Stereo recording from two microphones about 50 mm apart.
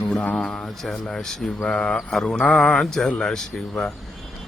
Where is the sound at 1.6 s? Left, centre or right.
Left.